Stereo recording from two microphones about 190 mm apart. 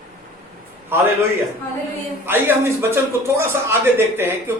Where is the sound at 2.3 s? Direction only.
10° right (ahead or behind).